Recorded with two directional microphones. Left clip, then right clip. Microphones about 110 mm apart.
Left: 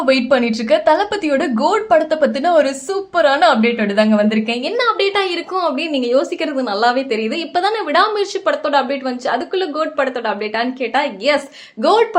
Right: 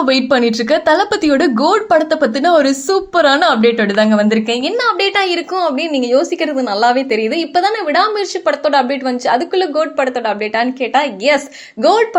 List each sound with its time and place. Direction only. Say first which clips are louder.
0.0 s a woman's voice: right 2 dB; 30° right (ahead or behind); by 8.5 s 15° right (ahead or behind)
8.6 s a woman's voice: right 3 dB; 25° right (ahead or behind)